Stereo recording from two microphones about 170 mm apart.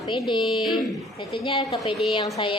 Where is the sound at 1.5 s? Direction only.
35° left (ahead or behind).